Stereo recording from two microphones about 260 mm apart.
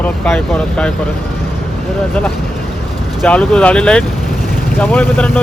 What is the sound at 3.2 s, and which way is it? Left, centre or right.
Speech, centre.